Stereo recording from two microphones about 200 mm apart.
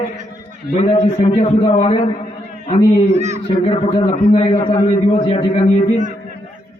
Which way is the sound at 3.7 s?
30° left (ahead or behind).